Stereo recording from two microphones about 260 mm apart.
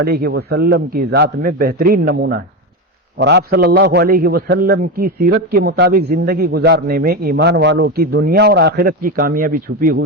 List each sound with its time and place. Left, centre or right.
0.0 s a man's voice: right